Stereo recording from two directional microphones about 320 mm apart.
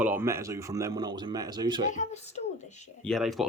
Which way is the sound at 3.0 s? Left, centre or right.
Centre.